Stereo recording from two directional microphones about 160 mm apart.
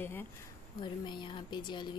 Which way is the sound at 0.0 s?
15° left (ahead or behind).